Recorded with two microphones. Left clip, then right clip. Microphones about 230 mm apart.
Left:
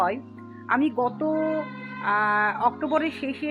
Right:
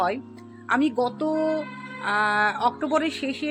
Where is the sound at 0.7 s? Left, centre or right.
Centre.